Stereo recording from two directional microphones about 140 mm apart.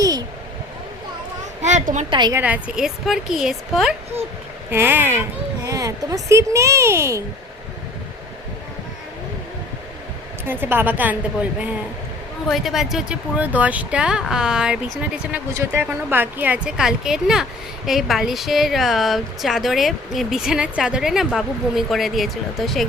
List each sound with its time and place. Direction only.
1.6 s a sound: 60° right (ahead or behind)
2.0 s a woman's voice: 30° right (ahead or behind)
2.4 s speech: 10° right (ahead or behind)
4.7 s speech: 15° right (ahead or behind)
10.4 s speech: 15° right (ahead or behind)